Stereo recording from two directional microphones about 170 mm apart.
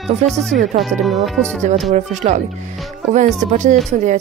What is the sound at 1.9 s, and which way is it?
Speech, 40° right (ahead or behind).